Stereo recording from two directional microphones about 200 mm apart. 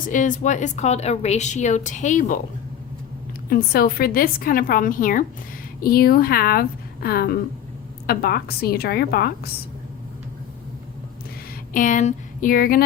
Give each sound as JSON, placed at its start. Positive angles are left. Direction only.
{"t": 0.0, "sound": "a woman's voice", "side_deg": 40}
{"t": 3.5, "sound": "a woman's voice", "side_deg": 50}
{"t": 11.7, "sound": "speech", "side_deg": 40}